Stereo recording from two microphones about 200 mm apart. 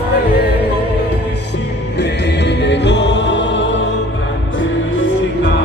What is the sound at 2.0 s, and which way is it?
Music, 60° left (ahead or behind).